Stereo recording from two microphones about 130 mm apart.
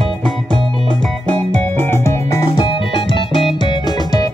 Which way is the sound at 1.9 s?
20° left (ahead or behind).